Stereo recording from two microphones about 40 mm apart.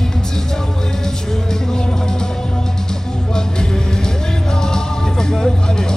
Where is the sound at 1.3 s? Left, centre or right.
Centre.